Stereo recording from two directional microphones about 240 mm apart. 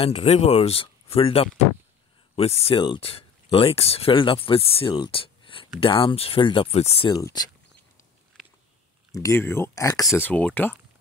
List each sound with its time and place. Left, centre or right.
0.0 s speech: left
8.3 s a sound: centre
9.1 s speech: centre